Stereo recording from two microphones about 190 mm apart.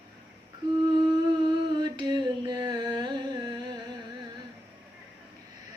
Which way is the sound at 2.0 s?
25° right (ahead or behind).